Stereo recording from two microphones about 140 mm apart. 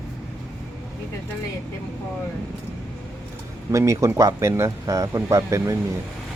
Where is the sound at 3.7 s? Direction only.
20° right (ahead or behind).